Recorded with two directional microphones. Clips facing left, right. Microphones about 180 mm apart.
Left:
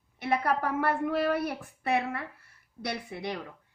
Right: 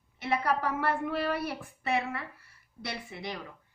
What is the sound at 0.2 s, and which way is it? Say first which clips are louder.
A woman's voice: left 1 dB; 55° left (ahead or behind).